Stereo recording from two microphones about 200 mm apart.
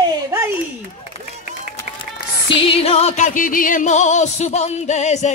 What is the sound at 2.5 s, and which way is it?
Music, 30° left (ahead or behind).